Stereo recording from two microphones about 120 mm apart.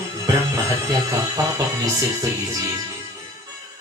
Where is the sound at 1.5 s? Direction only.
25° right (ahead or behind).